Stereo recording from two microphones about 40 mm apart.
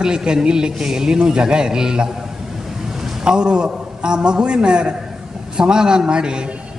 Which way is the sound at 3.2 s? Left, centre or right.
Right.